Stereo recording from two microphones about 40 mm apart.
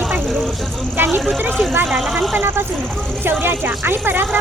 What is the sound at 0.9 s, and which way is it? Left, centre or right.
Speech, right.